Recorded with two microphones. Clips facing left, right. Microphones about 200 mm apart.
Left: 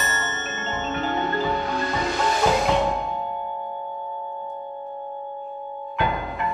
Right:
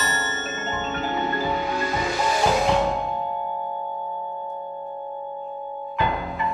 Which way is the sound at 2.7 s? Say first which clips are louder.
Even; centre (ahead or behind).